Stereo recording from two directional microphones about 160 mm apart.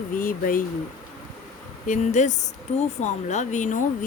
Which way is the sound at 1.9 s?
50° left (ahead or behind).